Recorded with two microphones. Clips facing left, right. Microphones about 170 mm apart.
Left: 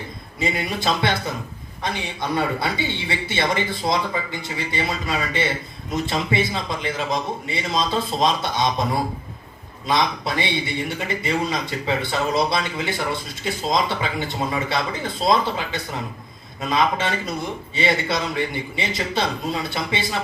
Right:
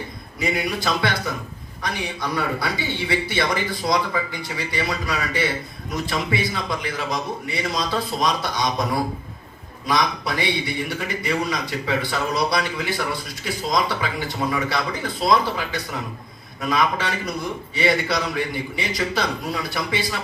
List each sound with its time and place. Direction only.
0.3 s a man's voice: 25° left (ahead or behind)